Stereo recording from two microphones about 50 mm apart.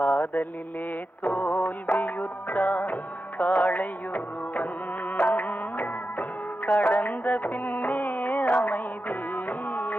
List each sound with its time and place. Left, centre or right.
0.0 s mantra: left
1.2 s music: left